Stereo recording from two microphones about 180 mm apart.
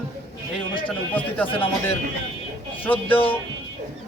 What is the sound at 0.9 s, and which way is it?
Speech, 10° left (ahead or behind).